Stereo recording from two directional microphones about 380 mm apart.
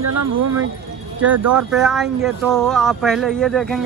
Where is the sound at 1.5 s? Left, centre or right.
Centre.